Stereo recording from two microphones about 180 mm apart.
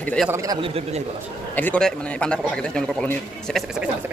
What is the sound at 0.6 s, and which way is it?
Speech, 35° right (ahead or behind).